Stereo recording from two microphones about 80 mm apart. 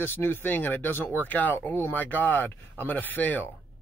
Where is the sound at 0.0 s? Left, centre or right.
Left.